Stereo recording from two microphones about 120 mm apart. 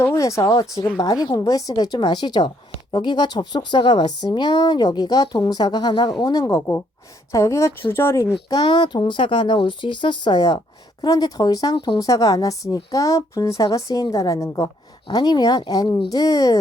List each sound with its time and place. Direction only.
0.0 s a woman's voice: 25° left (ahead or behind)
8.4 s a woman's voice: 35° left (ahead or behind)